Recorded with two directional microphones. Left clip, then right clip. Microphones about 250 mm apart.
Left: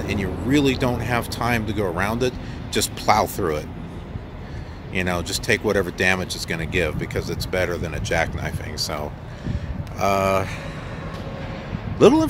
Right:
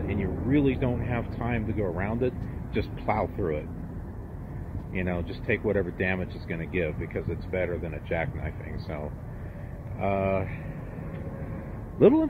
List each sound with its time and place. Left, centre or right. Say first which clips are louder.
0.1 s speech: left 6 dB; centre
4.9 s speech: left 9 dB; centre
12.0 s speech: left 5 dB; centre